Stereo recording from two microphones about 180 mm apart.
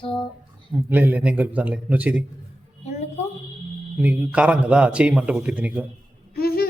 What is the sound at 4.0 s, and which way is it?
A man's voice, 10° right (ahead or behind).